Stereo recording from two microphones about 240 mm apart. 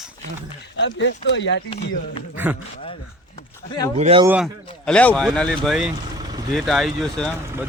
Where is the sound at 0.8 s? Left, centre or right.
Left.